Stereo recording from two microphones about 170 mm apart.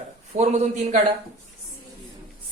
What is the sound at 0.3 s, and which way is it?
Speech, 40° right (ahead or behind).